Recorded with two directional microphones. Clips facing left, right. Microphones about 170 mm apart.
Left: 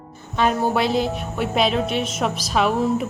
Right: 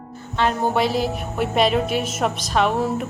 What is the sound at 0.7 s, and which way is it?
A woman's voice, centre (ahead or behind).